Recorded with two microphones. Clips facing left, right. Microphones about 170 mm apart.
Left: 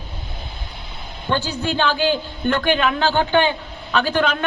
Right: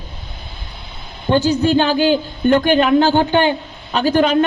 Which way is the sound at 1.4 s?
45° right (ahead or behind).